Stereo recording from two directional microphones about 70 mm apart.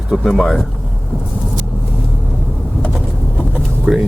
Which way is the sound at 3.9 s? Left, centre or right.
Centre.